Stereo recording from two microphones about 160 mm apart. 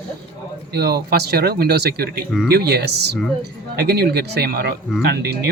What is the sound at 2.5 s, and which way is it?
Speech, 90° right.